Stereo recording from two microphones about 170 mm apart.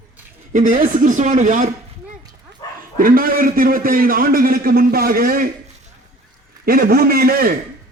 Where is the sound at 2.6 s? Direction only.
20° left (ahead or behind).